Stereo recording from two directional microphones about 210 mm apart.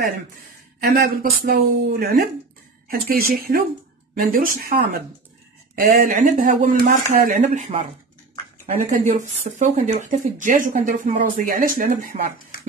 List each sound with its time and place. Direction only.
0.7 s speech: 45° right (ahead or behind)